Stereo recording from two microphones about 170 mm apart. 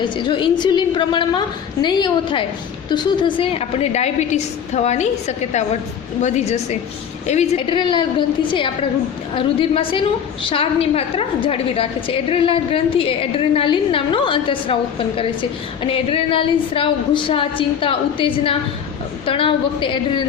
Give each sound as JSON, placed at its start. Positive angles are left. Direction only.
{"t": 0.0, "sound": "a woman's voice", "side_deg": 30}
{"t": 6.2, "sound": "a woman's voice", "side_deg": 40}
{"t": 7.7, "sound": "a woman's voice", "side_deg": 30}